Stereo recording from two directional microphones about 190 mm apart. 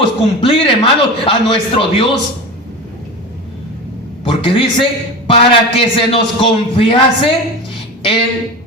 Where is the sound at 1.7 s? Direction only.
25° left (ahead or behind).